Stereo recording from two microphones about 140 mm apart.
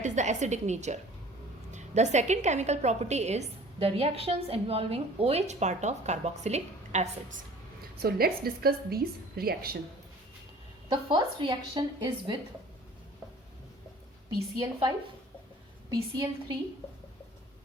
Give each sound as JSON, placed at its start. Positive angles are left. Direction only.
{"t": 0.0, "sound": "a woman's voice", "side_deg": -60}
{"t": 8.0, "sound": "a woman's voice", "side_deg": -90}
{"t": 10.8, "sound": "a woman's voice", "side_deg": -35}
{"t": 15.9, "sound": "a woman's voice", "side_deg": -30}